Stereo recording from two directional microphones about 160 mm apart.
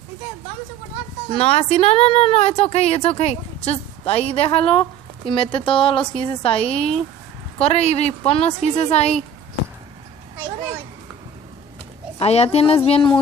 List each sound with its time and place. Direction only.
1.3 s speech: 40° left (ahead or behind)
12.2 s speech: 40° left (ahead or behind)